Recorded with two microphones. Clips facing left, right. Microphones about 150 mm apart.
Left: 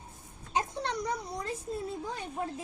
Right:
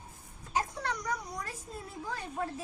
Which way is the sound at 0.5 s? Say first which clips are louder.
Left 1 dB; 25° left (ahead or behind).